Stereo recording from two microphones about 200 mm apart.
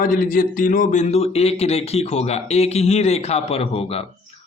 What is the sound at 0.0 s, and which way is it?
Speech, 45° left (ahead or behind).